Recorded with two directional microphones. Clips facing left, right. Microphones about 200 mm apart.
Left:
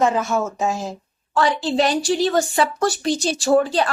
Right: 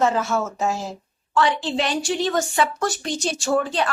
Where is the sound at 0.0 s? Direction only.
15° left (ahead or behind).